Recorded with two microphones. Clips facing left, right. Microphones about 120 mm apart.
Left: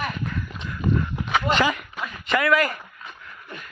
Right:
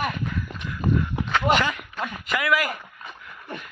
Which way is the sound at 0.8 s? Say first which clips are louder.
Even; 40° right (ahead or behind).